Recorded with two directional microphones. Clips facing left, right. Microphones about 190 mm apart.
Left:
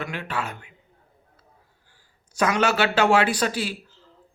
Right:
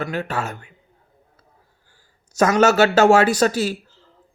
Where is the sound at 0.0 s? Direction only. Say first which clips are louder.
Right 5 dB; 40° right (ahead or behind).